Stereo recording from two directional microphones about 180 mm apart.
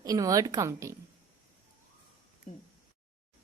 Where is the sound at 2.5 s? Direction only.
45° left (ahead or behind).